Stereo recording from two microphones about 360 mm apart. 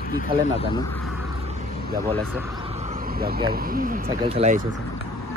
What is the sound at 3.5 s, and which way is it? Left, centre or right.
Speech, right.